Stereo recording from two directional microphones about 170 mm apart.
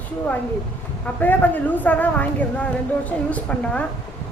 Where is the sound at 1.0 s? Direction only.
10° left (ahead or behind).